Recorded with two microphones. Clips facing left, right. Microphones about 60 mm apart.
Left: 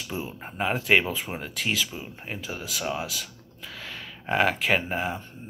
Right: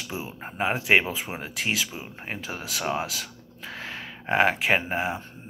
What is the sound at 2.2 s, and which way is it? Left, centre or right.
Speech, right.